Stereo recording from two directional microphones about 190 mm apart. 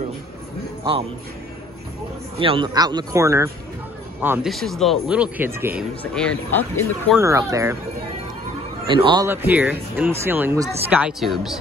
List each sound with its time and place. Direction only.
2.3 s speech: 30° right (ahead or behind); by 4.5 s 10° right (ahead or behind)
4.5 s speech: centre (ahead or behind)
6.1 s speech: 10° left (ahead or behind)
7.2 s speech: 15° right (ahead or behind)
8.8 s speech: 25° right (ahead or behind)
9.3 s speech: 10° right (ahead or behind)